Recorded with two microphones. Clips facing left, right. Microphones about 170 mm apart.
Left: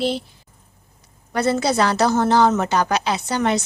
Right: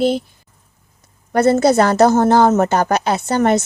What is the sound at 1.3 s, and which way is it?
A woman's voice, 50° right (ahead or behind).